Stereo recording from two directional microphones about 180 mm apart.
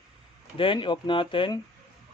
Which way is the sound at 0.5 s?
30° left (ahead or behind).